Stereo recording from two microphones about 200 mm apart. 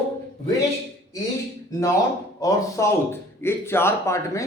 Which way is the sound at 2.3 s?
20° left (ahead or behind).